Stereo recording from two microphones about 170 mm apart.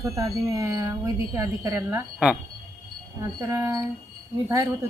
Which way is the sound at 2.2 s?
5° right (ahead or behind).